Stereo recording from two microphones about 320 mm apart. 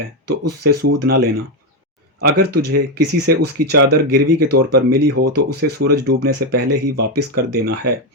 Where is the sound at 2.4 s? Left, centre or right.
Right.